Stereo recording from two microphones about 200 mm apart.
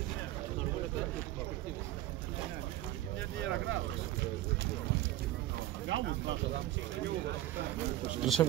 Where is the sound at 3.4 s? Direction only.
65° right (ahead or behind).